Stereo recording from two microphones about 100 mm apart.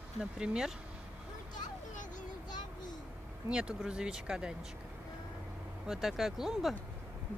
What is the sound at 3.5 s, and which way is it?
Speech, 10° right (ahead or behind).